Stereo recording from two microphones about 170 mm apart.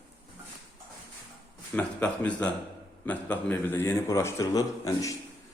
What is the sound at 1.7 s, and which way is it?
A man's voice, 10° left (ahead or behind).